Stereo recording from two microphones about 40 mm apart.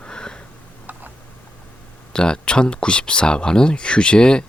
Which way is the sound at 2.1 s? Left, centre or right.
Left.